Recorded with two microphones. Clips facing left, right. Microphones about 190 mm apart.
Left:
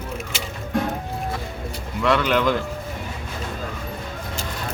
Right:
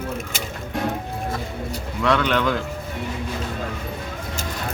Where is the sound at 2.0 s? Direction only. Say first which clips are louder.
Left 1 dB; centre (ahead or behind).